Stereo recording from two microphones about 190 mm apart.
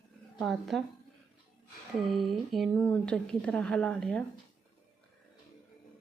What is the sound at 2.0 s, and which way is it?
A woman's voice, centre (ahead or behind).